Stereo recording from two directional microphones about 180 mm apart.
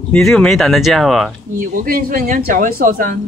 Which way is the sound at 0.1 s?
5° left (ahead or behind).